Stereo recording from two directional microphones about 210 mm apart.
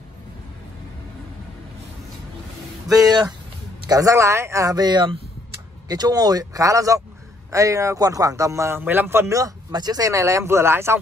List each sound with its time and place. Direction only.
2.9 s speech: 20° right (ahead or behind)